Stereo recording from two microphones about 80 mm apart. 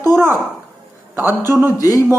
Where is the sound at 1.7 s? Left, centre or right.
Left.